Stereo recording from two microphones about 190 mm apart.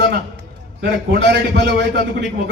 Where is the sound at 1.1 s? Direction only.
65° right (ahead or behind).